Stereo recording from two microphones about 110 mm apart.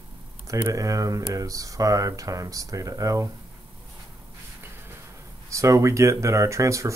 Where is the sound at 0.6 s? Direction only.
30° right (ahead or behind).